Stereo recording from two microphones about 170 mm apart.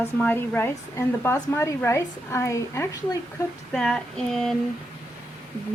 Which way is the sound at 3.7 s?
5° left (ahead or behind).